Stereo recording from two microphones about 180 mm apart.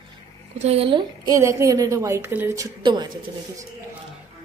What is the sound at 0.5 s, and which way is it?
Speech, 35° right (ahead or behind).